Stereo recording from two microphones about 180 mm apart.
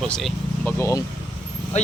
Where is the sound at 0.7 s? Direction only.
15° left (ahead or behind).